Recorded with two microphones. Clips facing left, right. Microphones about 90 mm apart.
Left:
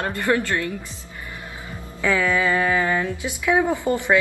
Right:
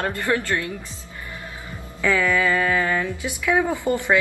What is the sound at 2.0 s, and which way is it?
Speech, 15° left (ahead or behind).